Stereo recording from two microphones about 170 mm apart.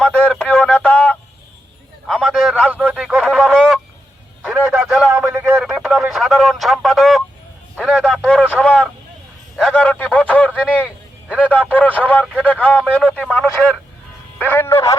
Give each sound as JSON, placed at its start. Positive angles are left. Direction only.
{"t": 0.0, "sound": "a man's voice", "side_deg": 5}
{"t": 4.4, "sound": "a man's voice", "side_deg": -10}
{"t": 5.1, "sound": "a man's voice", "side_deg": -15}
{"t": 5.5, "sound": "a man's voice", "side_deg": 0}